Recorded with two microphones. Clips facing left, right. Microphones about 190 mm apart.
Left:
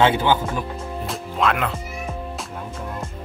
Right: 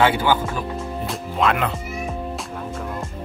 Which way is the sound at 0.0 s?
20° left (ahead or behind).